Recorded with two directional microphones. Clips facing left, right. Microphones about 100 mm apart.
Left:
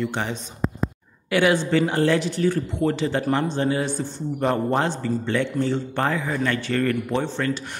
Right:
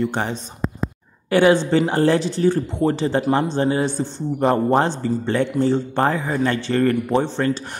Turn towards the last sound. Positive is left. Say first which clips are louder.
# right 5 dB
turn(degrees=-30)  # may be behind; listen again after turning